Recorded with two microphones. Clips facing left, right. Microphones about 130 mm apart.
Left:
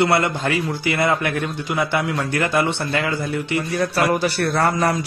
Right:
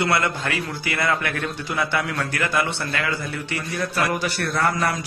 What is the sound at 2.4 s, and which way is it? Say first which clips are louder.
A man's voice: left 4 dB; 30° left (ahead or behind).